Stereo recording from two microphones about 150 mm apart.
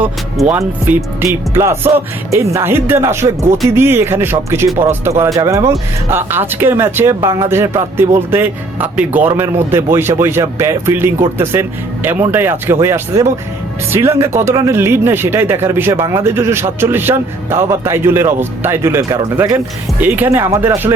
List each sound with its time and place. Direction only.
0.0 s speech: 10° right (ahead or behind)